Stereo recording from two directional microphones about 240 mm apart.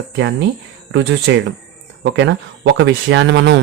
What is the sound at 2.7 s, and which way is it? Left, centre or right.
Speech, right.